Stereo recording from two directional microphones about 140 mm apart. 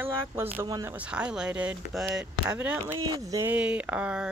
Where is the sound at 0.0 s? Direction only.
15° right (ahead or behind).